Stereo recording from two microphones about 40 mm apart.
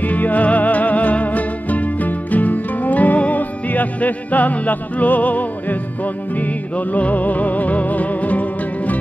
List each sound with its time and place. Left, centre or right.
0.0 s music: left